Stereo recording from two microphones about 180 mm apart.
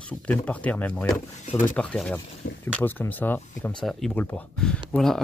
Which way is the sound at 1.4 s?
45° left (ahead or behind).